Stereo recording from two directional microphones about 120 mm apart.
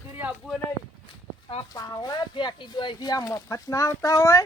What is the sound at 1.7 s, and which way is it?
Speech, 35° left (ahead or behind).